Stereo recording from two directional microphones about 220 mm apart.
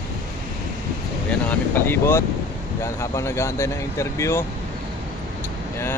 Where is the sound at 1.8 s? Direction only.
10° left (ahead or behind).